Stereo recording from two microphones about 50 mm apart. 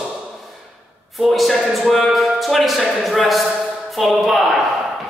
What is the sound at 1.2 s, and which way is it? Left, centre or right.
A man's voice, centre.